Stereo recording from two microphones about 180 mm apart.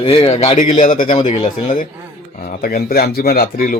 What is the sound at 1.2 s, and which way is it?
A man's voice, 40° left (ahead or behind).